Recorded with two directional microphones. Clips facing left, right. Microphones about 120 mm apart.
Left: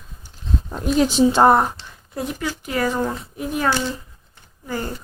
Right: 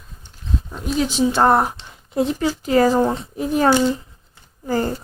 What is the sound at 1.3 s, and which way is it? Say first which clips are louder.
Speech: left 1 dB; 15° left (ahead or behind).